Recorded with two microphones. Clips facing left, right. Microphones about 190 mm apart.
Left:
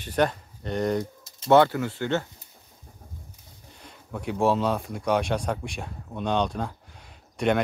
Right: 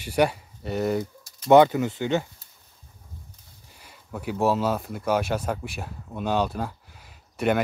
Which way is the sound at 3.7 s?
5° right (ahead or behind).